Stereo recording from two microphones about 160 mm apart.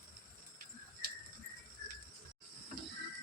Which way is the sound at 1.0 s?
65° right (ahead or behind).